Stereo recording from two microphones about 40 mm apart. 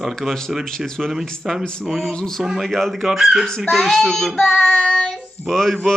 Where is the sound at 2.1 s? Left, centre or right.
Centre.